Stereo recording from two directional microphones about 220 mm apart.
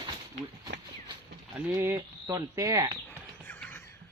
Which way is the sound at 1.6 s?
10° right (ahead or behind).